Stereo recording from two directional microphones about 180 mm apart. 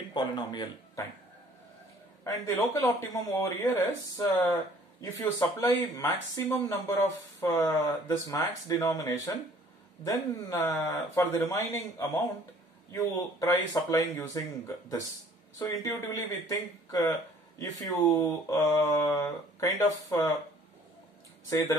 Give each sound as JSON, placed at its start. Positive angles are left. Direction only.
{"t": 0.1, "sound": "speech", "side_deg": 25}
{"t": 2.2, "sound": "speech", "side_deg": 20}